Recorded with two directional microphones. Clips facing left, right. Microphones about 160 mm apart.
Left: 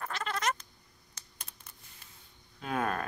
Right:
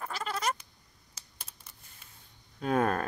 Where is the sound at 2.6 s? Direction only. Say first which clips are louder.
Right 5 dB; 40° right (ahead or behind).